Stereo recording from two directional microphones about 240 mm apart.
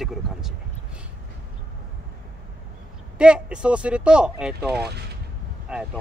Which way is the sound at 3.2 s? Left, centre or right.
Centre.